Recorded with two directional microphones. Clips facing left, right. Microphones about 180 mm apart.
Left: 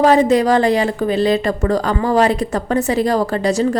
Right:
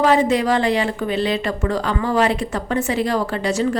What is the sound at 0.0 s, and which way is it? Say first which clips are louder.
A woman's voice: left 4 dB; 40° left (ahead or behind).